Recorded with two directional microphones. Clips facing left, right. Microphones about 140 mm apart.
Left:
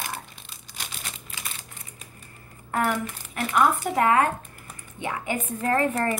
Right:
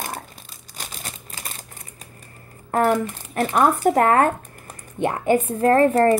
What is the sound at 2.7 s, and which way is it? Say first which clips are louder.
A woman's voice: right 7 dB; 40° right (ahead or behind).